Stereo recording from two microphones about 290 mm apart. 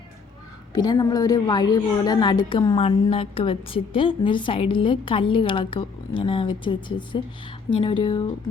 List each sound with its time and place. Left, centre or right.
0.7 s a woman's voice: centre